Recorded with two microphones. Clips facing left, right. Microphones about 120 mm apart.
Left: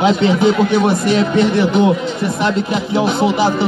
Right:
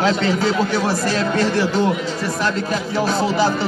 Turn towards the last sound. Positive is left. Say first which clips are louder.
# left 4 dB
turn(degrees=20)  # may be behind; listen again after turning